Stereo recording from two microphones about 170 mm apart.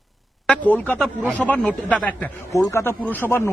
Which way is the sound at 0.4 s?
10° left (ahead or behind).